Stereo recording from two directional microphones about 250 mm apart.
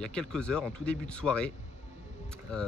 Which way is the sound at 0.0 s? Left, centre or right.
Centre.